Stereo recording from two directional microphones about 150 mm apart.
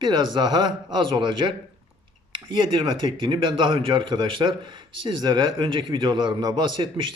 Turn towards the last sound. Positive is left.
turn(degrees=-35)  # may be behind; listen again after turning